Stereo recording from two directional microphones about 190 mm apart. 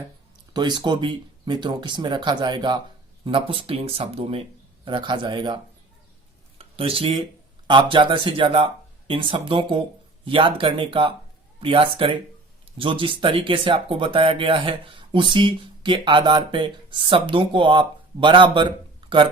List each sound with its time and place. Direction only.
0.5 s speech: 25° right (ahead or behind)
6.6 s speech: 30° right (ahead or behind)